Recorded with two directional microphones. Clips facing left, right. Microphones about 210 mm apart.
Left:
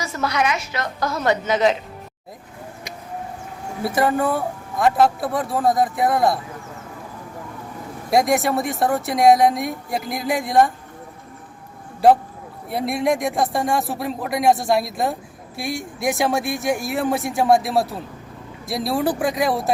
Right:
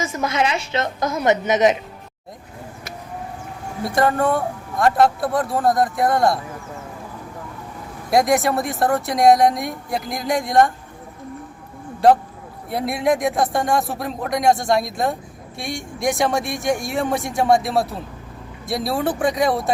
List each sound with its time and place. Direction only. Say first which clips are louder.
0.0 s a woman's voice: right 1 dB; 20° right (ahead or behind)
3.8 s speech: right 1 dB; 5° left (ahead or behind)
8.1 s speech: right 1 dB; centre (ahead or behind)
12.0 s speech: even; centre (ahead or behind)